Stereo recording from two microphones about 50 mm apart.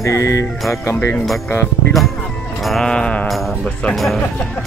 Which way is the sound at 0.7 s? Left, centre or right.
Left.